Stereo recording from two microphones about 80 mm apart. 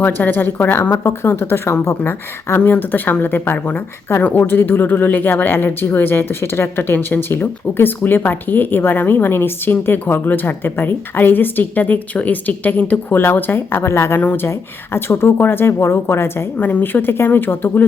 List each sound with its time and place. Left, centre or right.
0.0 s a woman's voice: left
14.2 s a woman's voice: left